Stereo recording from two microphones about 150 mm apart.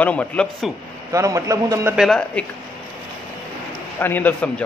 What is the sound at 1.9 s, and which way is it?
Speech, centre (ahead or behind).